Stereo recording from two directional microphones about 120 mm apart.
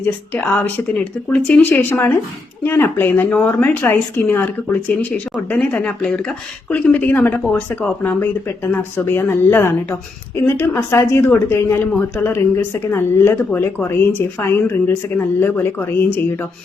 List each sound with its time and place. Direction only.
0.0 s speech: 10° left (ahead or behind)